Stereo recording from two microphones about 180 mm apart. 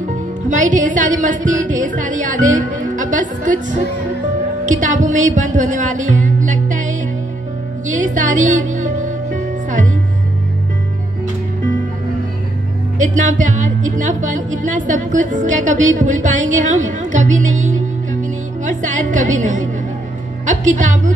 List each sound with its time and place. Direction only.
0.1 s a woman's voice: 45° right (ahead or behind)
4.6 s music: 45° right (ahead or behind)
13.0 s a woman's voice: 45° right (ahead or behind)